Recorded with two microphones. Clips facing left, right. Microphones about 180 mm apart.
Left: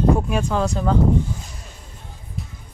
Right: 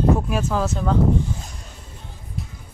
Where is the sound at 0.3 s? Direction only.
Centre (ahead or behind).